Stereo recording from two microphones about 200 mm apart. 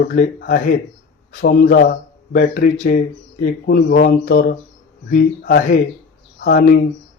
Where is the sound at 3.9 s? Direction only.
55° left (ahead or behind).